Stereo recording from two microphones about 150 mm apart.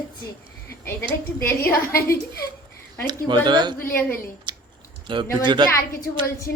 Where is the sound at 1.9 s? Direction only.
90° left.